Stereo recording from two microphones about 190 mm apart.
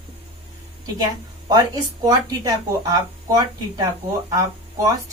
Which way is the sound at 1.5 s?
20° right (ahead or behind).